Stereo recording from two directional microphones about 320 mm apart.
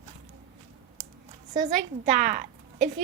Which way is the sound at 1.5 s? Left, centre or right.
Right.